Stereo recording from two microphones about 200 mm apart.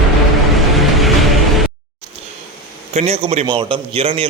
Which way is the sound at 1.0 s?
Centre (ahead or behind).